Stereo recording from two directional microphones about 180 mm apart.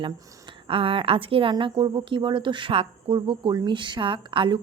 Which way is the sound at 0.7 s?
30° right (ahead or behind).